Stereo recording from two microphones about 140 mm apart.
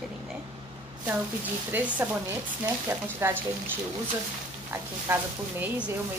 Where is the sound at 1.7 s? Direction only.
10° right (ahead or behind).